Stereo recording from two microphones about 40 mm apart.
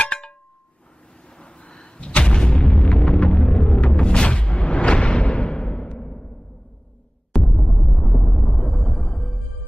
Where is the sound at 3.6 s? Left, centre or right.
Left.